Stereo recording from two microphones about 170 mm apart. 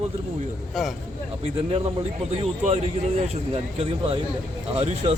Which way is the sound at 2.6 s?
40° right (ahead or behind).